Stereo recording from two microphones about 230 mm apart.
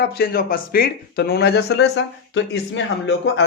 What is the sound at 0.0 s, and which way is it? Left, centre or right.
Speech, left.